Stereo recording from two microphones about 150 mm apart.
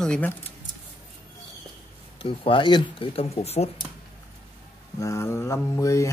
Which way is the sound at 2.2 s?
35° left (ahead or behind).